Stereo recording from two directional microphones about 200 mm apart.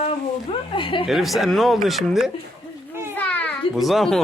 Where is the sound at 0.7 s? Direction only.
25° left (ahead or behind).